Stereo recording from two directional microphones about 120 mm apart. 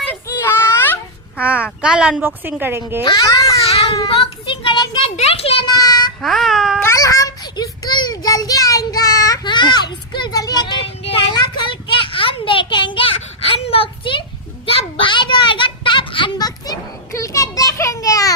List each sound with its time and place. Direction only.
0.3 s children playing: 20° left (ahead or behind)
1.4 s a woman's voice: 10° right (ahead or behind)
3.0 s a child's voice: 35° left (ahead or behind)
3.6 s baby cry: 55° left (ahead or behind)
4.1 s a child's voice: 45° left (ahead or behind)
5.1 s a child's voice: 55° left (ahead or behind)
5.6 s child singing: 35° left (ahead or behind)
6.2 s babbling: centre (ahead or behind)
6.7 s child singing: 25° left (ahead or behind)
10.8 s child singing: 50° left (ahead or behind)
11.3 s a sound: 40° left (ahead or behind)